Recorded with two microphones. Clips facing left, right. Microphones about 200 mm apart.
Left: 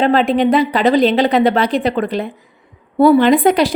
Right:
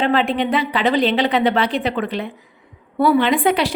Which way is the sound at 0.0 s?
40° left (ahead or behind).